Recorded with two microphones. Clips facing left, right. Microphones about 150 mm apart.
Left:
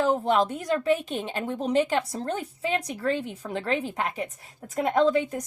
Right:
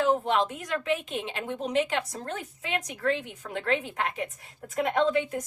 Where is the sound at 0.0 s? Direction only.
40° left (ahead or behind).